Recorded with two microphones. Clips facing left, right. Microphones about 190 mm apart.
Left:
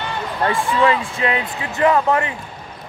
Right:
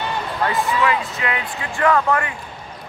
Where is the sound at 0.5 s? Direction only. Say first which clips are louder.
Left 3 dB; 30° left (ahead or behind).